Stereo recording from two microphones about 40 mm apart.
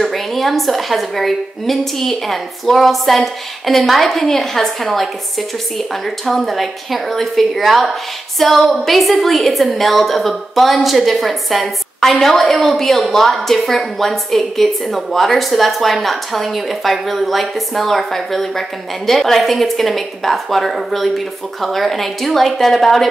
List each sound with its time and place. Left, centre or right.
0.0 s a woman's voice: centre